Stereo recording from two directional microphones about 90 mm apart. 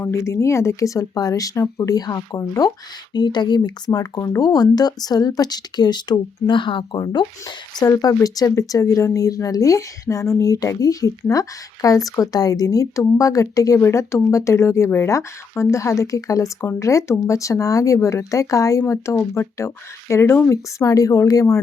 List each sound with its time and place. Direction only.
0.0 s speech: 30° left (ahead or behind); by 7.0 s 60° left (ahead or behind)
7.0 s speech: 50° left (ahead or behind)